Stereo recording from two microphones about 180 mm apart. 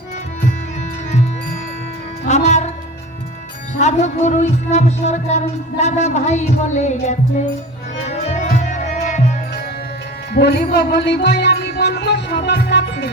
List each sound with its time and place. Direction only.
2.2 s music: 40° left (ahead or behind)
3.8 s a woman's voice: 40° left (ahead or behind)
8.0 s music: 40° left (ahead or behind)
10.3 s music: 65° left (ahead or behind)